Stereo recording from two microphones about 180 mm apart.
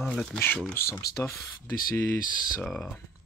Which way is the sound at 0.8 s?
55° left (ahead or behind).